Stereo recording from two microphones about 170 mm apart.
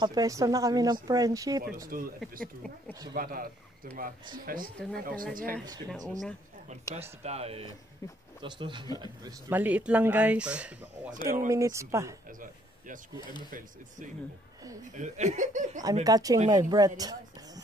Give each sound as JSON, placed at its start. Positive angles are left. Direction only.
{"t": 0.0, "sound": "a woman's voice", "side_deg": -20}
{"t": 1.9, "sound": "speech", "side_deg": -55}
{"t": 2.9, "sound": "a woman's voice", "side_deg": -25}
{"t": 3.2, "sound": "speech", "side_deg": -55}
{"t": 6.7, "sound": "a woman's voice", "side_deg": -40}
{"t": 9.5, "sound": "speech", "side_deg": -10}
{"t": 11.2, "sound": "speech", "side_deg": -15}
{"t": 12.3, "sound": "speech", "side_deg": -50}
{"t": 14.9, "sound": "speech", "side_deg": -45}
{"t": 15.8, "sound": "a woman's voice", "side_deg": -20}